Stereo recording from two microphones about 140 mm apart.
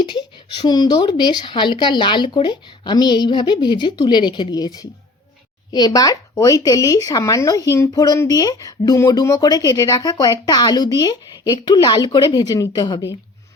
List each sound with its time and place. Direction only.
0.0 s a woman's voice: 35° left (ahead or behind)